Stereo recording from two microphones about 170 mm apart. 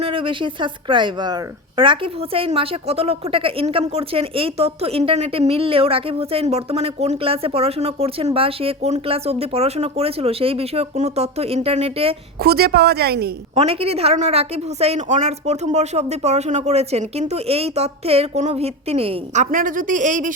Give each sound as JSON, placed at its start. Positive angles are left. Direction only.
{"t": 0.0, "sound": "a woman's voice", "side_deg": -30}
{"t": 12.4, "sound": "a woman's voice", "side_deg": -70}
{"t": 13.6, "sound": "a woman's voice", "side_deg": -35}